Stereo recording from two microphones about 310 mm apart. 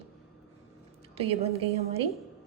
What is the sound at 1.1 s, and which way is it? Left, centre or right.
Speech, centre.